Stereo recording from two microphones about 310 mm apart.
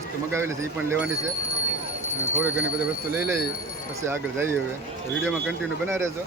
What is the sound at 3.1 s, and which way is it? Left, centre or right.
Speech, centre.